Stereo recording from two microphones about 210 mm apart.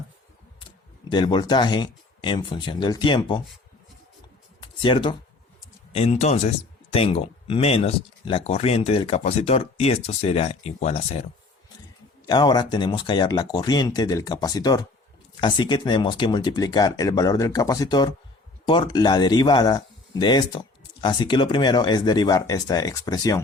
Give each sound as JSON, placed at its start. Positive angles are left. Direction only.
{"t": 1.1, "sound": "speech", "side_deg": 20}
{"t": 4.6, "sound": "speech", "side_deg": 25}